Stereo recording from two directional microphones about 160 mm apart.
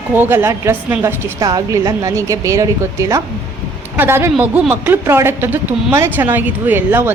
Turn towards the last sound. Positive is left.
turn(degrees=-10)  # may be behind; listen again after turning